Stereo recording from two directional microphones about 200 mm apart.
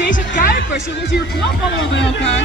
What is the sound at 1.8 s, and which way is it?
Speech, 65° left (ahead or behind).